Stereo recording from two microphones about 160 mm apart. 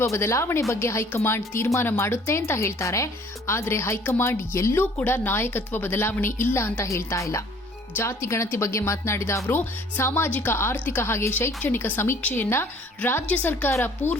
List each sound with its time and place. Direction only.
0.0 s speech: 15° left (ahead or behind)